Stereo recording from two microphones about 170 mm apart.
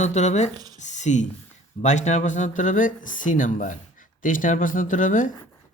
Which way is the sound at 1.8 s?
45° left (ahead or behind).